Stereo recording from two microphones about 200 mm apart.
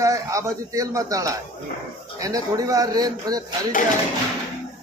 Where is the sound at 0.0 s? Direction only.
15° right (ahead or behind).